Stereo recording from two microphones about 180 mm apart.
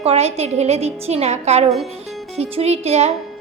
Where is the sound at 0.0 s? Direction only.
35° right (ahead or behind).